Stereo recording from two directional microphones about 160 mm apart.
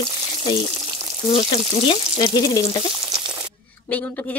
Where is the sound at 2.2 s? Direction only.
20° left (ahead or behind).